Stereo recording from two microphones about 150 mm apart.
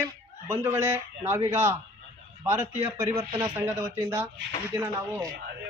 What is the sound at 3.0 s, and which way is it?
Speech, 20° right (ahead or behind).